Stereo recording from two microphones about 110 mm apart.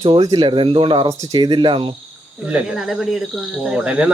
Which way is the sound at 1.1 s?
35° right (ahead or behind).